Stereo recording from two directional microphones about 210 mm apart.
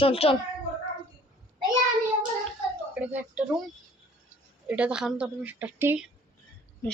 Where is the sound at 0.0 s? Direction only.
25° left (ahead or behind).